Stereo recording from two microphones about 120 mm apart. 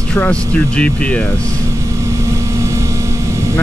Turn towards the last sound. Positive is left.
turn(degrees=-25)  # may be behind; listen again after turning